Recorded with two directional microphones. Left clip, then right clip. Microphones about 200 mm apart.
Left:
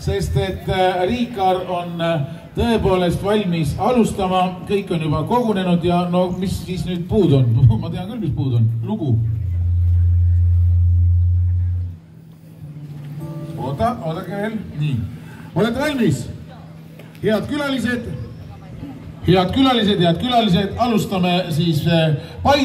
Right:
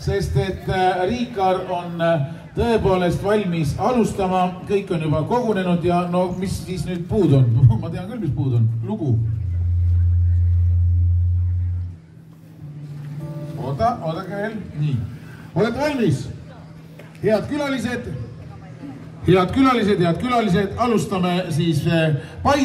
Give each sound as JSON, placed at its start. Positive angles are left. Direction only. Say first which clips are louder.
{"t": 0.0, "sound": "a man's voice", "louder": "left 1 dB", "side_deg": 20}
{"t": 13.7, "sound": "speech", "louder": "even", "side_deg": 35}
{"t": 15.5, "sound": "a man's voice", "louder": "left 1 dB", "side_deg": 40}
{"t": 17.2, "sound": "a man's voice", "louder": "even", "side_deg": 15}
{"t": 19.2, "sound": "a man's voice", "louder": "left 1 dB", "side_deg": -5}